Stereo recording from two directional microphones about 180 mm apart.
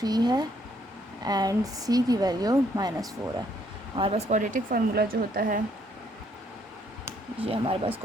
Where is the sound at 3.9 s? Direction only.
35° right (ahead or behind); by 5.6 s 50° right (ahead or behind).